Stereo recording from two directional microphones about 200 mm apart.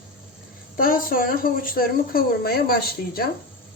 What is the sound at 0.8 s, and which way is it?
Speech, 45° left (ahead or behind).